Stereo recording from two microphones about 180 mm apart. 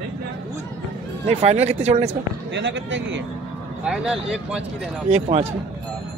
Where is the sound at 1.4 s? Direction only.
35° right (ahead or behind).